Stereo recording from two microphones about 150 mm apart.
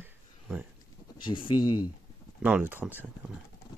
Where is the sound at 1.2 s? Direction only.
35° left (ahead or behind).